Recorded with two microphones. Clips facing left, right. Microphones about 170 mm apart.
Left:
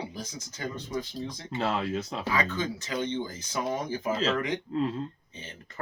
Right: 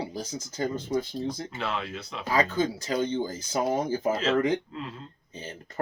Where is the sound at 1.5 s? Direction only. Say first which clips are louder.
Left 4 dB; 35° left (ahead or behind).